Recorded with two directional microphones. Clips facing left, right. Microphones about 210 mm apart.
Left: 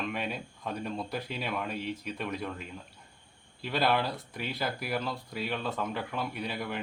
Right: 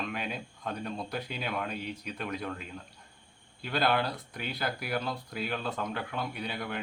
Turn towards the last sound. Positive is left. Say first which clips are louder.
# left 1 dB
turn(degrees=0)  # may be behind; listen again after turning